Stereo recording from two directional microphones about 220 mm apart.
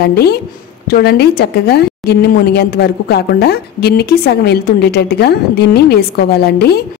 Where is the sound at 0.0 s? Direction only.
45° left (ahead or behind).